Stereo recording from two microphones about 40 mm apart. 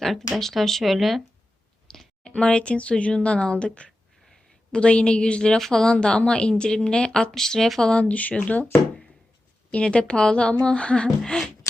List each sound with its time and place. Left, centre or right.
0.0 s speech: centre
2.2 s a woman's voice: left
7.9 s speech: left
9.7 s a woman's voice: left
11.2 s speech: centre